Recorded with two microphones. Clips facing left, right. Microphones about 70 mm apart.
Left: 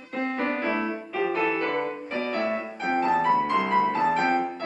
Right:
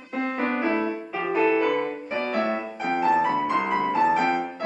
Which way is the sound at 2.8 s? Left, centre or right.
Centre.